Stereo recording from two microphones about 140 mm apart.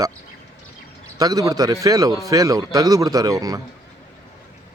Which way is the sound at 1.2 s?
25° right (ahead or behind).